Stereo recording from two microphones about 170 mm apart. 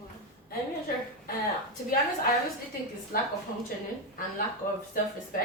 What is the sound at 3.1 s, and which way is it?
Speech, 55° left (ahead or behind).